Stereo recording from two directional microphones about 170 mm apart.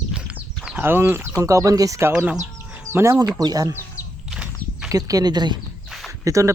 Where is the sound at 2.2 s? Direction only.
10° right (ahead or behind).